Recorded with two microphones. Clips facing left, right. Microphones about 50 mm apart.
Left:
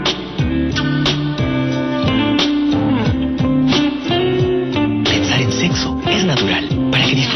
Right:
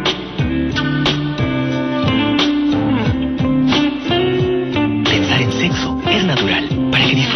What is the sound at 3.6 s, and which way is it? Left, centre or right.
Music, centre.